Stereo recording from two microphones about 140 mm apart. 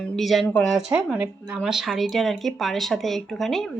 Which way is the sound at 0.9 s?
10° right (ahead or behind).